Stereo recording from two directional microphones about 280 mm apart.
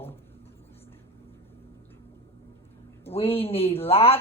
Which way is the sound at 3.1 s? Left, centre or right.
Left.